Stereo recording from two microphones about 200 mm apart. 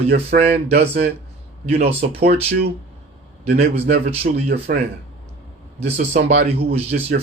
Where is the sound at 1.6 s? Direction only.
30° right (ahead or behind).